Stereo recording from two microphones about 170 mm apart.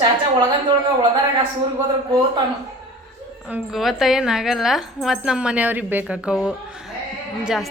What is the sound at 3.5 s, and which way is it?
A woman's voice, centre (ahead or behind).